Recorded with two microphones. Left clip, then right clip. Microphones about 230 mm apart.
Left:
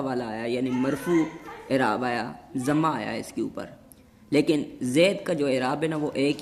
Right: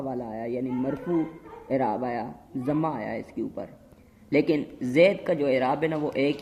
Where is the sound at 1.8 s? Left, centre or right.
Left.